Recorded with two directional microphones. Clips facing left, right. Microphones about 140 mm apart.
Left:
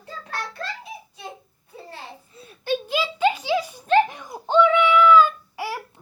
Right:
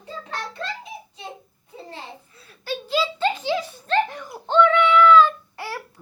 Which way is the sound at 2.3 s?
20° left (ahead or behind).